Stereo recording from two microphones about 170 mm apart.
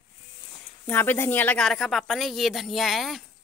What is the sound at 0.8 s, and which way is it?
Speech, 10° left (ahead or behind).